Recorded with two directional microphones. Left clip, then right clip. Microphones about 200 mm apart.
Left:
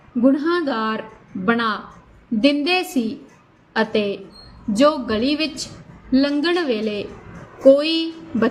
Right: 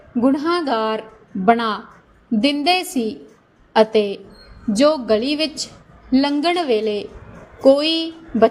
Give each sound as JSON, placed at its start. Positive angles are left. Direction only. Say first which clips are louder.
{"t": 0.2, "sound": "a woman's voice", "louder": "even", "side_deg": -30}